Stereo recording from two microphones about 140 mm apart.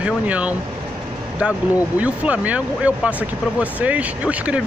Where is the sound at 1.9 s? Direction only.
10° right (ahead or behind).